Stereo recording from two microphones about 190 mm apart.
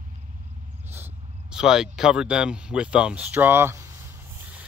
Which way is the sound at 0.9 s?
10° right (ahead or behind).